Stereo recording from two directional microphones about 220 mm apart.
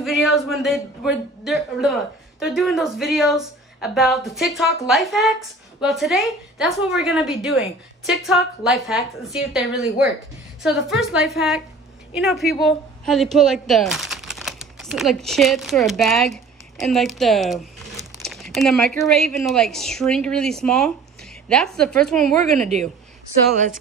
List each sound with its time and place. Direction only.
0.0 s a man's voice: centre (ahead or behind)
18.2 s a sound: centre (ahead or behind)
19.0 s a woman's voice: centre (ahead or behind)
22.2 s a woman's voice: 35° right (ahead or behind)